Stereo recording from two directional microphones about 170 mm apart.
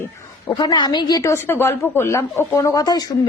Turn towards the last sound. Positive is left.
turn(degrees=20)  # may be behind; listen again after turning